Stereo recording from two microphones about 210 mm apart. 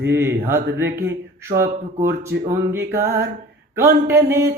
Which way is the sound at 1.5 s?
30° right (ahead or behind).